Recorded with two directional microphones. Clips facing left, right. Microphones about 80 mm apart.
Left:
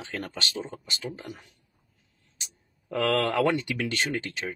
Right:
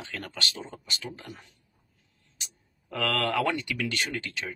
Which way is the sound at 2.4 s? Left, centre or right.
Left.